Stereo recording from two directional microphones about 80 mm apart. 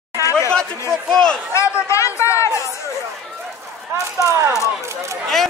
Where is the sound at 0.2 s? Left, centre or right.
Left.